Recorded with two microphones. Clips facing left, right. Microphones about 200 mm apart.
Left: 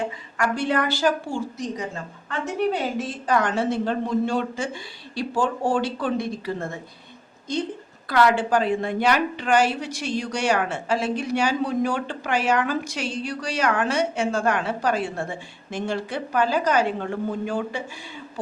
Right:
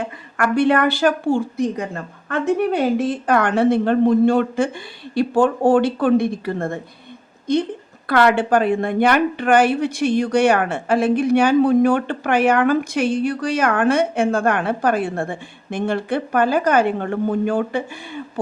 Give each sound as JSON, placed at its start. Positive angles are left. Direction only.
{"t": 0.0, "sound": "a woman's voice", "side_deg": -60}
{"t": 8.0, "sound": "a woman's voice", "side_deg": -60}